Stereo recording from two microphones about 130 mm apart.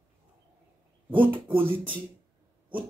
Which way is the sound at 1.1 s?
15° right (ahead or behind).